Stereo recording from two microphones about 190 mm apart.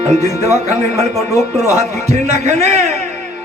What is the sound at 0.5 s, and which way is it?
A man's voice, 35° right (ahead or behind).